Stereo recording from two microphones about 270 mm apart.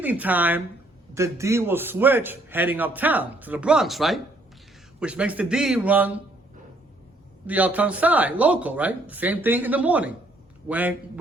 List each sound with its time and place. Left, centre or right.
0.0 s a man's voice: centre
7.4 s speech: centre